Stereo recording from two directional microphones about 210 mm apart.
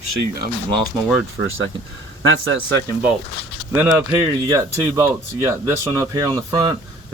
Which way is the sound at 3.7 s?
10° right (ahead or behind).